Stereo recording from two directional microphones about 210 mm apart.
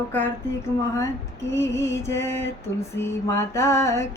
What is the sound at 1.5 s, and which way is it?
Mantra, 15° left (ahead or behind).